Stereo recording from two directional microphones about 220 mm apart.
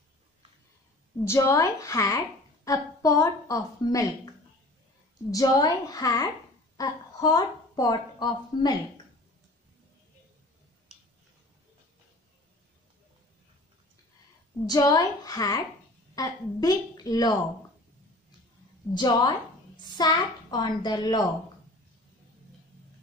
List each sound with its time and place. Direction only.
1.2 s a woman's voice: 10° left (ahead or behind)
5.3 s a woman's voice: 15° left (ahead or behind)
14.7 s a woman's voice: 15° left (ahead or behind)
18.9 s a woman's voice: 20° left (ahead or behind)